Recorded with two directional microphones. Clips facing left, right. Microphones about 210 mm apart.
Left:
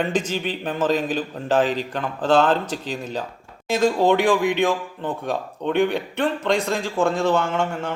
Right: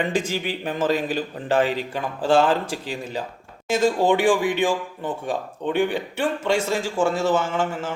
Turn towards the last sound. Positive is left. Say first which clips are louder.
# left 1 dB
turn(degrees=-5)  # may be behind; listen again after turning